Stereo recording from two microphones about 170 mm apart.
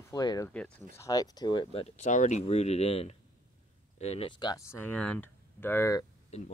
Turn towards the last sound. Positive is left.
turn(degrees=40)  # may be behind; listen again after turning